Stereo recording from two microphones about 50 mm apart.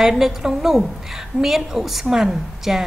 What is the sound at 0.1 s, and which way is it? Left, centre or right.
A woman's voice, centre.